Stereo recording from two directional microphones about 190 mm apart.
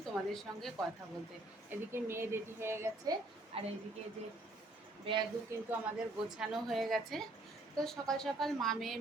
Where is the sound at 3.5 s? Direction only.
30° right (ahead or behind).